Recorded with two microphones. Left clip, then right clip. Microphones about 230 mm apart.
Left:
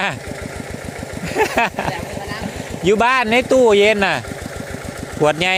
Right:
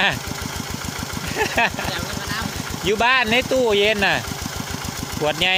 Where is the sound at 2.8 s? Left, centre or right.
Left.